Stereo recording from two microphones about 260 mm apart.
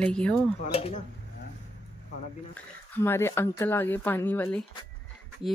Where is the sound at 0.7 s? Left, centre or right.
Left.